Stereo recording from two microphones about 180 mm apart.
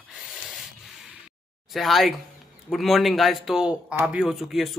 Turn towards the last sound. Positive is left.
turn(degrees=0)  # may be behind; listen again after turning